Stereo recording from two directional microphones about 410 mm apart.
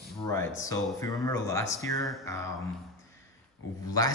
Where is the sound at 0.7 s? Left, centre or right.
Centre.